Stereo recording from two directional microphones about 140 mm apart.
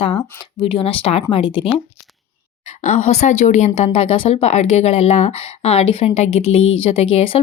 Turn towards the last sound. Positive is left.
turn(degrees=40)  # may be behind; listen again after turning